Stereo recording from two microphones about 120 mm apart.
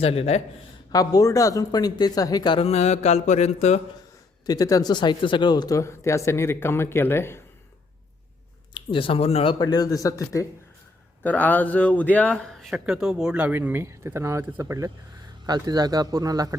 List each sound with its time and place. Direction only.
0.0 s a man's voice: 55° left (ahead or behind)
0.9 s speech: 30° left (ahead or behind)
2.6 s mantra: 60° left (ahead or behind)
4.4 s speech: 30° left (ahead or behind)
8.7 s speech: 45° left (ahead or behind)
9.6 s speech: 35° left (ahead or behind)
11.2 s speech: 15° left (ahead or behind)
12.8 s speech: 5° right (ahead or behind); by 14.8 s 25° right (ahead or behind)
15.4 s speech: 35° right (ahead or behind)